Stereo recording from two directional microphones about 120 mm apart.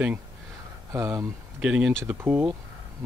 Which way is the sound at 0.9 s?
25° right (ahead or behind).